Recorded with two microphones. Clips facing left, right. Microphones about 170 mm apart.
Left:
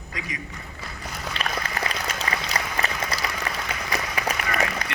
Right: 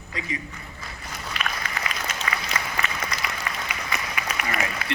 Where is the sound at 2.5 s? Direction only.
35° left (ahead or behind).